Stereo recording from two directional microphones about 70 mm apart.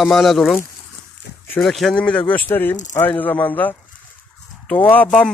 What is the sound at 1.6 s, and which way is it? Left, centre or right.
Speech, centre.